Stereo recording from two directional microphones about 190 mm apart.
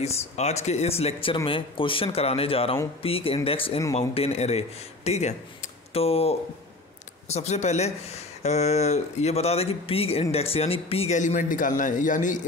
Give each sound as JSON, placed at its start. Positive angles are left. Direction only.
{"t": 0.0, "sound": "speech", "side_deg": 35}